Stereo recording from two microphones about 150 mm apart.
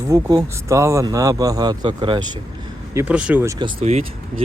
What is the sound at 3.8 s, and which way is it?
Speech, 45° right (ahead or behind).